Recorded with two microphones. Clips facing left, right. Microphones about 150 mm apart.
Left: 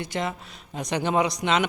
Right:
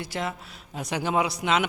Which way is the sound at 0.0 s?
5° right (ahead or behind).